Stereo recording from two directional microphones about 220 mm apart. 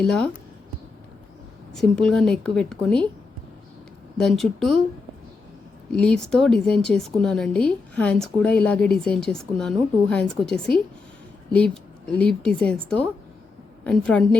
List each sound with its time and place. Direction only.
0.0 s a woman's voice: 5° left (ahead or behind)
1.7 s a woman's voice: centre (ahead or behind)
4.2 s a woman's voice: centre (ahead or behind)
6.0 s a woman's voice: 5° left (ahead or behind)